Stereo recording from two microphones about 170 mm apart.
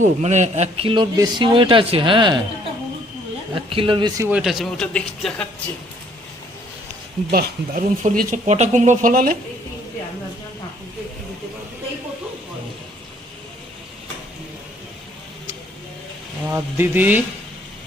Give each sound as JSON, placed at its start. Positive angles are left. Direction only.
{"t": 0.0, "sound": "a man's voice", "side_deg": -45}
{"t": 3.5, "sound": "speech", "side_deg": -30}
{"t": 4.2, "sound": "speech", "side_deg": -5}
{"t": 7.3, "sound": "speech", "side_deg": -60}
{"t": 8.4, "sound": "speech", "side_deg": -40}
{"t": 16.5, "sound": "speech", "side_deg": -10}